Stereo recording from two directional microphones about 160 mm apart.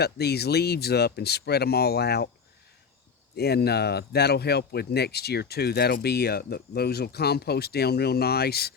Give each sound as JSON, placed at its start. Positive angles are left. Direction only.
{"t": 0.0, "sound": "speech", "side_deg": 90}
{"t": 3.3, "sound": "speech", "side_deg": 90}